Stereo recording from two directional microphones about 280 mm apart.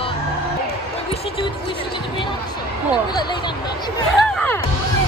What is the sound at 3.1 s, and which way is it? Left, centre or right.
Speech, centre.